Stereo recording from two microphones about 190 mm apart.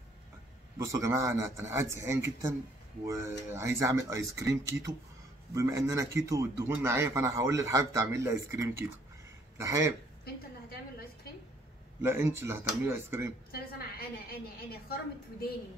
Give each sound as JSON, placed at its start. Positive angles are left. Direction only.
{"t": 0.7, "sound": "a man's voice", "side_deg": -15}
{"t": 12.0, "sound": "a man's voice", "side_deg": -15}
{"t": 13.5, "sound": "a woman's voice", "side_deg": 55}